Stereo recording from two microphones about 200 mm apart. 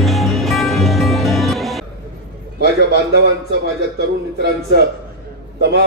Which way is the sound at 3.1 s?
55° right (ahead or behind).